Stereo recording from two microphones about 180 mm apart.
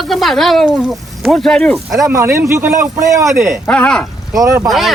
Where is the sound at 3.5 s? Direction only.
5° left (ahead or behind).